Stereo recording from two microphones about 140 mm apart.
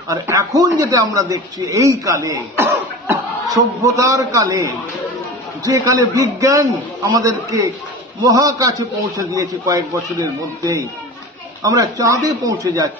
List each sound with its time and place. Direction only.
0.1 s a man's voice: 25° right (ahead or behind)